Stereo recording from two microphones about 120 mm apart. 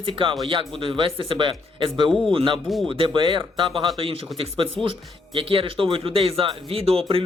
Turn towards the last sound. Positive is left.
turn(degrees=-55)  # may be behind; listen again after turning